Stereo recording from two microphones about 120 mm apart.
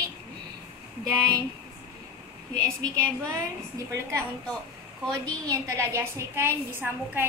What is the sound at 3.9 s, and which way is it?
Speech, 25° right (ahead or behind).